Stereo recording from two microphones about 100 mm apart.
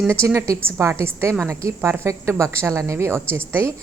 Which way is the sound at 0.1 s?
25° right (ahead or behind).